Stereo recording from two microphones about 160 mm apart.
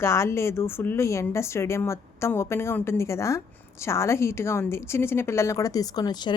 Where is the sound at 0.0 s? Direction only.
15° left (ahead or behind).